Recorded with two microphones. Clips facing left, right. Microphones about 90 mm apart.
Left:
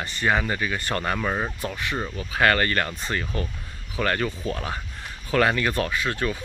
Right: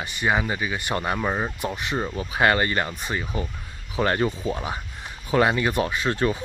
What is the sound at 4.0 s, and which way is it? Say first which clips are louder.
Speech: right 3 dB; 25° right (ahead or behind).